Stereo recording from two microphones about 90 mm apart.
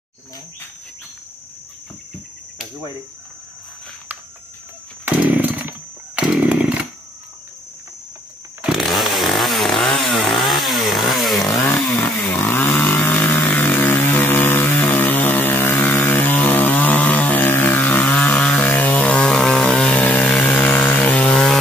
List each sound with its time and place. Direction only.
5.0 s chainsaw: 20° right (ahead or behind)
8.6 s chainsaw: centre (ahead or behind)
12.0 s chainsaw: 25° left (ahead or behind); by 21.5 s 5° left (ahead or behind)